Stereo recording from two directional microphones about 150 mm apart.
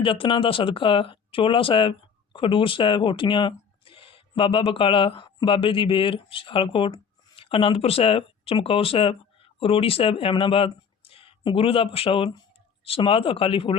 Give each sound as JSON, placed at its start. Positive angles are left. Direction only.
{"t": 0.0, "sound": "speech", "side_deg": 35}